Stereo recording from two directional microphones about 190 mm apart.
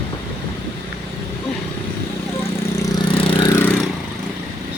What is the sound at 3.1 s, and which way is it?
Vehicle, 25° left (ahead or behind).